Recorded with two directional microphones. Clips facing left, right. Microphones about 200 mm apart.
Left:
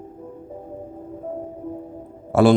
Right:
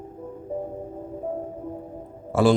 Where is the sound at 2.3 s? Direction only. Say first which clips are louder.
Left 4 dB; 65° left (ahead or behind).